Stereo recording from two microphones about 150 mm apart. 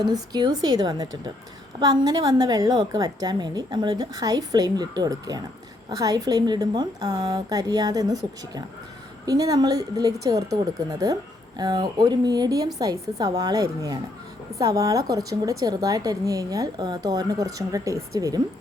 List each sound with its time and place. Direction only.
0.0 s a woman's voice: 25° right (ahead or behind)